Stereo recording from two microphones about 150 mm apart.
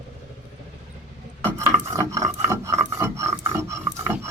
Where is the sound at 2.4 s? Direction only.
20° right (ahead or behind).